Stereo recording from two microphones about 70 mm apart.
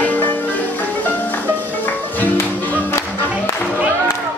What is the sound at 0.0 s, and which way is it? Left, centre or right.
Music, left.